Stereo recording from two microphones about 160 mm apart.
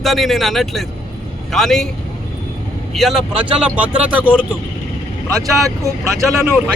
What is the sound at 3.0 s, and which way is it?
Speech, centre (ahead or behind).